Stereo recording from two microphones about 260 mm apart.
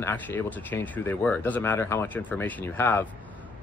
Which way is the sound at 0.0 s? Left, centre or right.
Centre.